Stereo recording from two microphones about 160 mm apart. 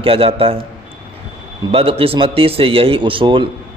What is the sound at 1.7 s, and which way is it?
Speech, 35° right (ahead or behind).